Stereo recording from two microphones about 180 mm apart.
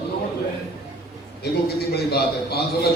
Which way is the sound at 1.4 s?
60° left (ahead or behind).